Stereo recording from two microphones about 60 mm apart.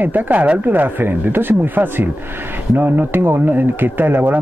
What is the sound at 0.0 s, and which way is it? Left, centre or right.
Speech, right.